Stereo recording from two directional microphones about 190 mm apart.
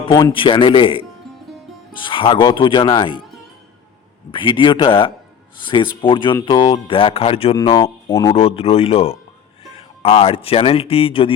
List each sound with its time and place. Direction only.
0.2 s speech: 25° left (ahead or behind)
4.3 s speech: 25° left (ahead or behind)
8.3 s speech: 30° left (ahead or behind)